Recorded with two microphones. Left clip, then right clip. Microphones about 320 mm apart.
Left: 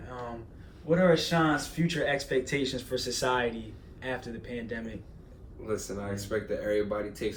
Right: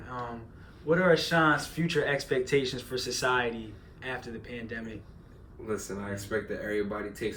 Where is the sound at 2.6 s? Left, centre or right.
Right.